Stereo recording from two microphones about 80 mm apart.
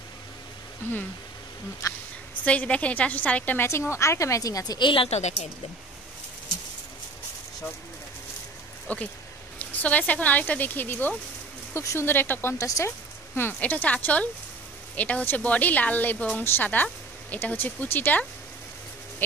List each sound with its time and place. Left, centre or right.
1.8 s speech: left
2.4 s a woman's voice: centre
3.9 s speech: left
4.7 s speech: left
8.8 s speech: centre
11.7 s speech: left
12.5 s speech: left
13.3 s speech: left